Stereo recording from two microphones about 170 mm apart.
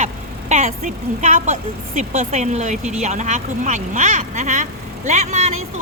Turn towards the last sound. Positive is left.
turn(degrees=-45)  # may be behind; listen again after turning